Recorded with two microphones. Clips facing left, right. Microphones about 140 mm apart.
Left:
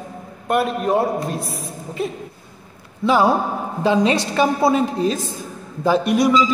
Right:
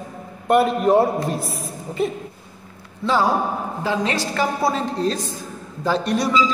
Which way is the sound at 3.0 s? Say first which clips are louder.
Left 3 dB; 15° left (ahead or behind).